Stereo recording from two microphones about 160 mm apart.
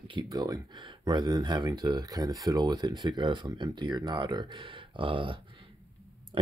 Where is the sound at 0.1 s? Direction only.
25° right (ahead or behind).